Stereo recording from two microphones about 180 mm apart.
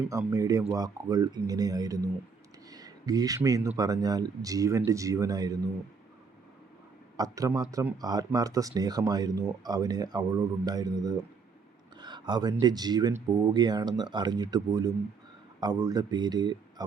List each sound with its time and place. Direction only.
0.1 s speech: 15° right (ahead or behind)
2.6 s a sound: 20° right (ahead or behind)
3.8 s speech: 20° right (ahead or behind)
7.2 s speech: 20° right (ahead or behind)